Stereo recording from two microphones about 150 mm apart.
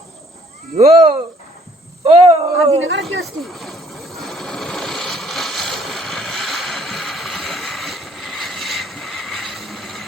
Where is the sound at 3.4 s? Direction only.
Centre (ahead or behind).